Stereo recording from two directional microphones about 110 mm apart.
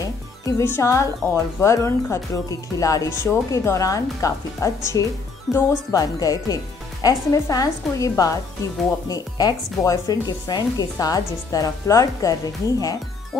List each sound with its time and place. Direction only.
0.6 s a woman's voice: 25° left (ahead or behind)